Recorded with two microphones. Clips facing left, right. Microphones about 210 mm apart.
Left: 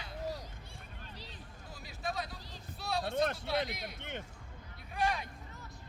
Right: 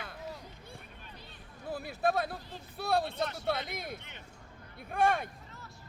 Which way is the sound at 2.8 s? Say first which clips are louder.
Right 6 dB; 55° right (ahead or behind).